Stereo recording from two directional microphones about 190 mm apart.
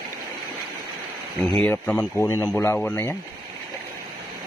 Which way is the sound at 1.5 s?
5° left (ahead or behind).